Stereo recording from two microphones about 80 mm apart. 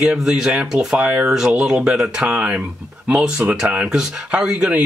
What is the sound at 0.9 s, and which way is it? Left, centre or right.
Speech, centre.